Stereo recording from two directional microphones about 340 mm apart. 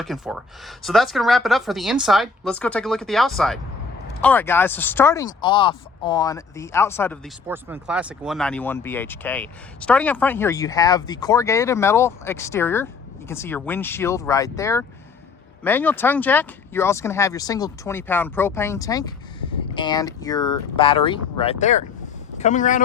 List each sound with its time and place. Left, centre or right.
0.0 s speech: centre
7.4 s speech: centre; by 22.8 s left